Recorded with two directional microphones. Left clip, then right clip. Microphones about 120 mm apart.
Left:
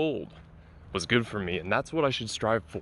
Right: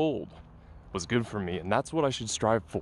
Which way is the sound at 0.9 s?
15° right (ahead or behind).